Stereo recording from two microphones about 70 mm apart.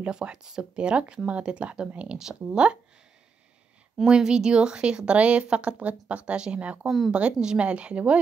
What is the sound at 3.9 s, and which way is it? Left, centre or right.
A woman's voice, centre.